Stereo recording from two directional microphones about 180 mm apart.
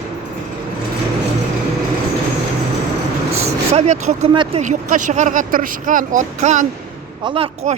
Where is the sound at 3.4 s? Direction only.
40° right (ahead or behind).